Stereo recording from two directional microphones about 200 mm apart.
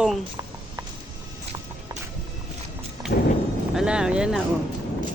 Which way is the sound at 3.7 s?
5° right (ahead or behind).